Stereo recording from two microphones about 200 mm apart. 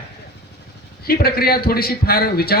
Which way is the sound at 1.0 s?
50° left (ahead or behind).